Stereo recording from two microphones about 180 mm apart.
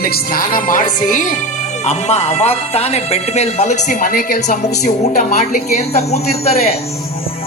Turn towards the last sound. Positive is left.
turn(degrees=35)  # may be behind; listen again after turning